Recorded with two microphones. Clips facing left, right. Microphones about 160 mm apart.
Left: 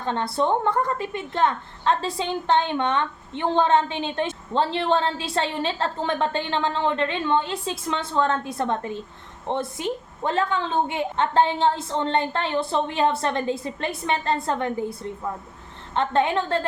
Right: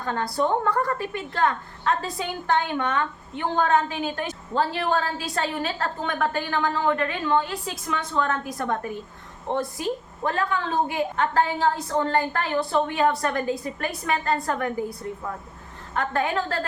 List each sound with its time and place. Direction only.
0.0 s a woman's voice: 25° left (ahead or behind)
16.0 s a woman's voice: 25° left (ahead or behind)